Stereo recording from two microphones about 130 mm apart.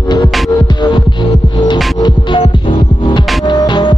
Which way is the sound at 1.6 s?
35° left (ahead or behind).